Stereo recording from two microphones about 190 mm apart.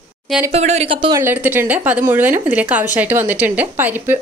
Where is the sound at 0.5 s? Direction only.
35° right (ahead or behind).